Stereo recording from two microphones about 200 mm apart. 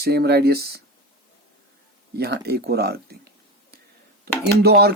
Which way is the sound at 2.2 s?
55° right (ahead or behind).